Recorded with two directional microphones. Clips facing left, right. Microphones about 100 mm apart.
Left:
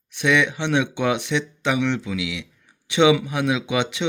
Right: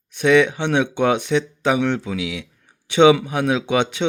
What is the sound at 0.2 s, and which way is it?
Speech, 40° right (ahead or behind).